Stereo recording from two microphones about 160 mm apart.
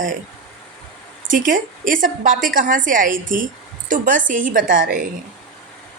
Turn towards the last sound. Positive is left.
turn(degrees=-60)  # may be behind; listen again after turning